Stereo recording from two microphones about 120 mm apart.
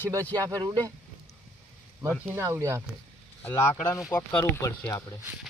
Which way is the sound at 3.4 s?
20° left (ahead or behind).